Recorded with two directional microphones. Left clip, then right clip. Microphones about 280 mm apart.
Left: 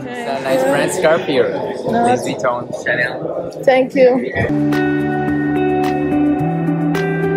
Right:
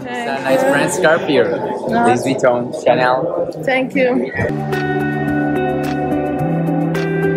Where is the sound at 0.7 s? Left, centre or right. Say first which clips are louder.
Even; right.